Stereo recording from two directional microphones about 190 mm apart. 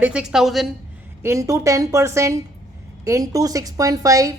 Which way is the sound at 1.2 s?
15° right (ahead or behind).